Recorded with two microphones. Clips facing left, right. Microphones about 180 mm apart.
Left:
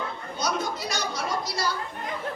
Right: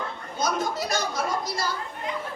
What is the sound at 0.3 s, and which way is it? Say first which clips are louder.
A woman's voice: right 3 dB; 50° right (ahead or behind).